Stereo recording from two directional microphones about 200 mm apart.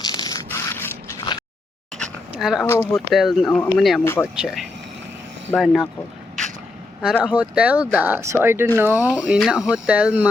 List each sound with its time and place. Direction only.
0.0 s biting: 20° left (ahead or behind)
2.4 s speech: centre (ahead or behind)
4.0 s speech: 10° left (ahead or behind)
4.4 s speech: centre (ahead or behind)
7.0 s speech: centre (ahead or behind)